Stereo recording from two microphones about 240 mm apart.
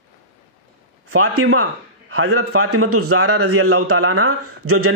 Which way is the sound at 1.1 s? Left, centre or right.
Right.